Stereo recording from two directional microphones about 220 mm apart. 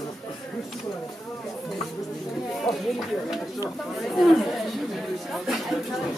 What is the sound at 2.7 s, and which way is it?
Speech, centre (ahead or behind).